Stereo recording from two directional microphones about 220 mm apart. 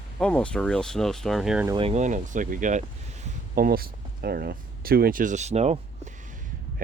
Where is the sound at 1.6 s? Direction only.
25° right (ahead or behind).